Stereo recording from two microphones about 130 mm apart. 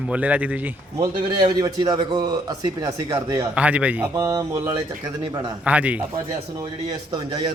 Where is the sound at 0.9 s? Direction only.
35° right (ahead or behind).